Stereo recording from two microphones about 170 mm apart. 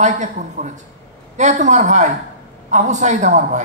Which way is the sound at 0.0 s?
45° right (ahead or behind).